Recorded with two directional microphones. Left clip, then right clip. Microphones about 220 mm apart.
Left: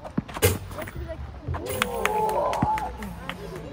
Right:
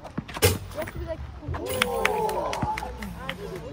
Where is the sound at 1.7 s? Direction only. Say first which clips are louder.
Right 2 dB; 5° left (ahead or behind).